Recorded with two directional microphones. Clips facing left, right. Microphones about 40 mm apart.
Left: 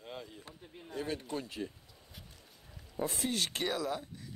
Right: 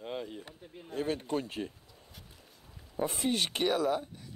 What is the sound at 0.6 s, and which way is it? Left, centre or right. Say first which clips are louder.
Speech: right 2 dB; centre.